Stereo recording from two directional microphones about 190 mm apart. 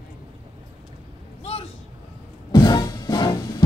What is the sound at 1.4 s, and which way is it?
Vehicle, 30° left (ahead or behind).